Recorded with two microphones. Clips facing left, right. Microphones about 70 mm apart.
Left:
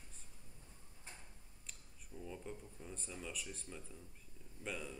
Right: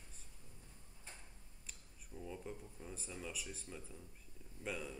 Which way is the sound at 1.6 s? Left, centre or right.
Centre.